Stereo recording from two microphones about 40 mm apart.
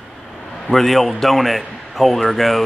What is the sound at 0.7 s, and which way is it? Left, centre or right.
Speech, centre.